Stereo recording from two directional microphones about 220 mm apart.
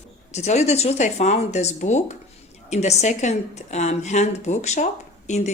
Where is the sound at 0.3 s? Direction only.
30° left (ahead or behind).